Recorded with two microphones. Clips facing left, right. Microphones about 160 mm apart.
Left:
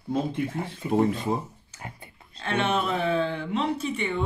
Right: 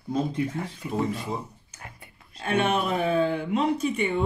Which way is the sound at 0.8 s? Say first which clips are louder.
Left 7 dB; 20° left (ahead or behind).